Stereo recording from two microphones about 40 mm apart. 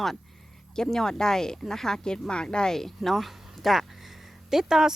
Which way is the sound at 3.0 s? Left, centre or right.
Centre.